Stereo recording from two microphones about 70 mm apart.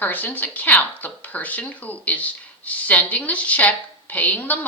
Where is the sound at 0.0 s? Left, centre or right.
Left.